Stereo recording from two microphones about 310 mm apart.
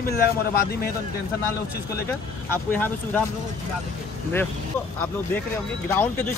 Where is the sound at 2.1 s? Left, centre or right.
Centre.